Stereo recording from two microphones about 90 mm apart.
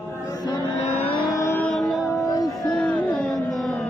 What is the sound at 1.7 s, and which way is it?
Music, centre (ahead or behind).